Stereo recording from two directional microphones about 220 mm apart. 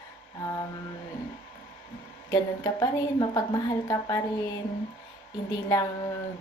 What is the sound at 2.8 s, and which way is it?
Female singing, 15° left (ahead or behind).